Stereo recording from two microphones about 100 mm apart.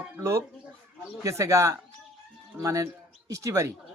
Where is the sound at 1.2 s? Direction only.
30° right (ahead or behind).